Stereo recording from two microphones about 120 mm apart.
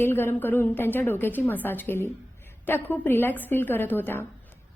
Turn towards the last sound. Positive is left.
turn(degrees=15)  # may be behind; listen again after turning